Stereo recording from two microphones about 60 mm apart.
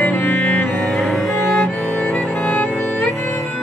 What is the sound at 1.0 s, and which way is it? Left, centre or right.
Cello, centre.